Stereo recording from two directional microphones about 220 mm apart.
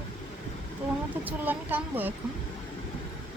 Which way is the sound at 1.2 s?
10° right (ahead or behind).